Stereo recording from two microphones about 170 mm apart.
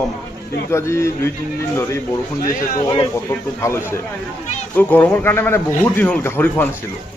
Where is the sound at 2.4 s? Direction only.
55° left (ahead or behind).